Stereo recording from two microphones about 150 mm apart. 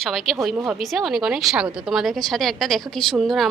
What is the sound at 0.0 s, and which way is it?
A woman's voice, centre (ahead or behind).